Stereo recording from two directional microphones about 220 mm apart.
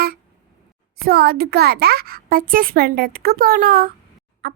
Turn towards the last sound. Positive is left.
turn(degrees=-45)  # may be behind; listen again after turning